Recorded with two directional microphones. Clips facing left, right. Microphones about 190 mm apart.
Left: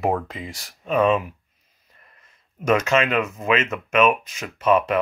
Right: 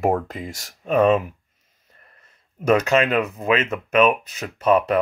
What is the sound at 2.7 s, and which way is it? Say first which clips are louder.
Speech: right 2 dB; 35° right (ahead or behind).